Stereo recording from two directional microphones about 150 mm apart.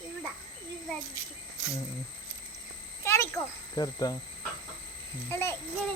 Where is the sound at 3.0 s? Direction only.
20° left (ahead or behind).